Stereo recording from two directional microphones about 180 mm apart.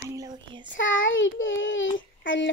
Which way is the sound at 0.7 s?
90° left.